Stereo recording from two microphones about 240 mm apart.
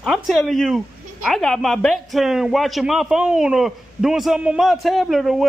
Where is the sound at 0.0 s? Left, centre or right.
Centre.